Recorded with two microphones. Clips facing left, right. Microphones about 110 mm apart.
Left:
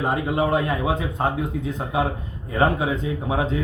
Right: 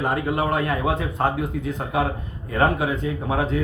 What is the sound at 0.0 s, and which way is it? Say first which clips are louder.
A man's voice: left 1 dB; 20° left (ahead or behind).